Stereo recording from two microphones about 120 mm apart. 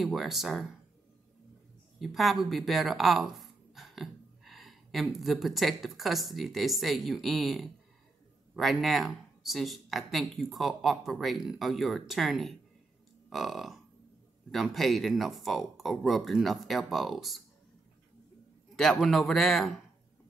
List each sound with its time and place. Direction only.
0.0 s speech: centre (ahead or behind)
2.0 s speech: centre (ahead or behind)
18.8 s speech: centre (ahead or behind)